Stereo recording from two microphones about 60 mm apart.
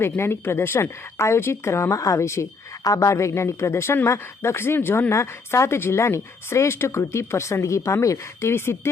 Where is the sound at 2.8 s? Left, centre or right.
Left.